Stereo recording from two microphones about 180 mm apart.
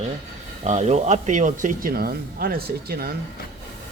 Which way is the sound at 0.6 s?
40° right (ahead or behind).